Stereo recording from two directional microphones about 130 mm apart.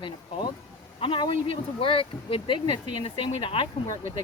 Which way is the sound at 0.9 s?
45° left (ahead or behind).